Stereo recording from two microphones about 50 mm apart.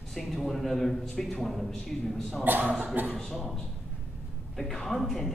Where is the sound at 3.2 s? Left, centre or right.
Centre.